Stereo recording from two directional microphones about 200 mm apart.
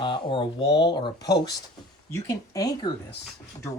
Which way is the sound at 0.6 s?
60° left (ahead or behind).